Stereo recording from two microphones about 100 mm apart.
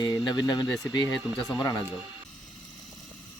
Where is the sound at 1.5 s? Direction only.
35° left (ahead or behind).